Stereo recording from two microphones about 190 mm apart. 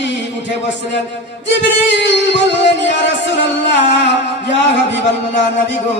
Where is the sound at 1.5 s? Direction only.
65° left (ahead or behind).